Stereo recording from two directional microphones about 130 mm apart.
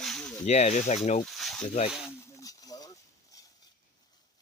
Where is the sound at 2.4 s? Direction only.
30° left (ahead or behind).